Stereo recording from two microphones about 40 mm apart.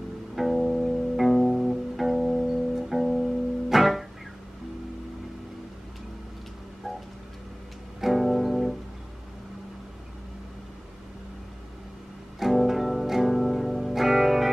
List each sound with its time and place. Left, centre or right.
0.4 s music: centre
8.0 s music: centre
12.4 s music: centre